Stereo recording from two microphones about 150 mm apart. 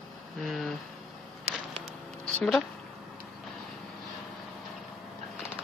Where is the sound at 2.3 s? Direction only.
5° left (ahead or behind).